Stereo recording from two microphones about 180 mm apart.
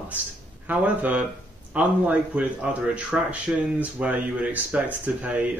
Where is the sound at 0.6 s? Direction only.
10° right (ahead or behind).